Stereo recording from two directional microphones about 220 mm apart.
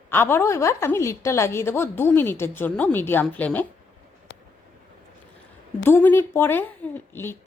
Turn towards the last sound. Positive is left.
turn(degrees=10)  # may be behind; listen again after turning